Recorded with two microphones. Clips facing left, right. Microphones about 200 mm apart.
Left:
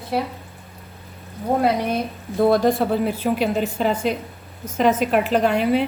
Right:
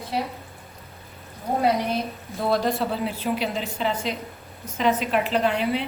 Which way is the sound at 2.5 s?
50° left (ahead or behind).